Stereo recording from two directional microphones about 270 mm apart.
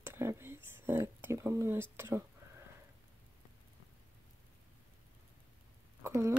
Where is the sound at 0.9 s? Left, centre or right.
Centre.